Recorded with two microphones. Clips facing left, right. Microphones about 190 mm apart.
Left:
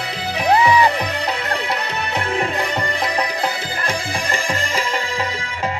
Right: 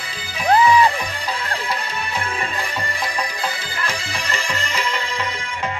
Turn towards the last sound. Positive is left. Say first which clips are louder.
# left 4 dB
turn(degrees=65)  # may be behind; listen again after turning